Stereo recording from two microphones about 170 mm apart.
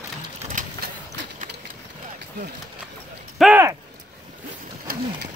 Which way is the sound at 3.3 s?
5° right (ahead or behind).